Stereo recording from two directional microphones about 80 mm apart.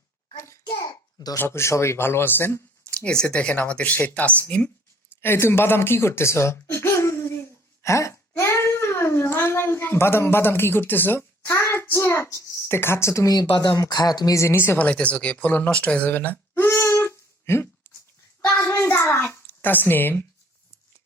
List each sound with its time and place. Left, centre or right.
0.8 s a sound: left
1.4 s speech: left
2.9 s speech: centre
5.2 s a child's voice: left
14.3 s speech: left
16.6 s a sound: left